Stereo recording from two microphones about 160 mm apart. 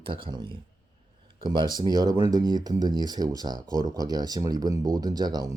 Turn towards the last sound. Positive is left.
turn(degrees=-25)  # may be behind; listen again after turning